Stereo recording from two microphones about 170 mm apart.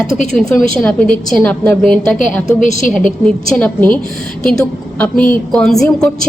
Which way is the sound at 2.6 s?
45° left (ahead or behind).